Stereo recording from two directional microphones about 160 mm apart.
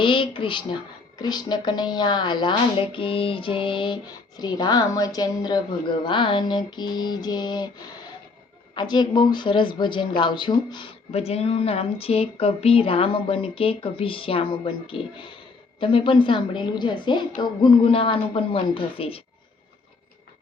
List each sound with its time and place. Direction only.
0.0 s speech: 30° left (ahead or behind)
8.7 s speech: 25° left (ahead or behind)
11.1 s speech: 40° left (ahead or behind)